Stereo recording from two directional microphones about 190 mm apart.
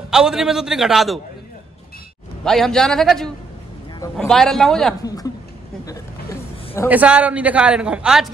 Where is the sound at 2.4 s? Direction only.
Centre (ahead or behind).